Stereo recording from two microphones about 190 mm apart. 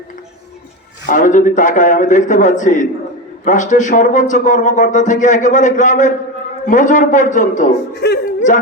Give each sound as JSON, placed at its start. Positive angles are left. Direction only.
{"t": 1.0, "sound": "a man's voice", "side_deg": 45}
{"t": 7.9, "sound": "music", "side_deg": 60}